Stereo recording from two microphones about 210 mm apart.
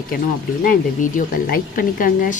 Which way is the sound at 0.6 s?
40° left (ahead or behind).